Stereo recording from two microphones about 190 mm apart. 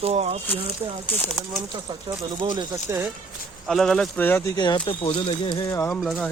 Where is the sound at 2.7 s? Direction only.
10° right (ahead or behind).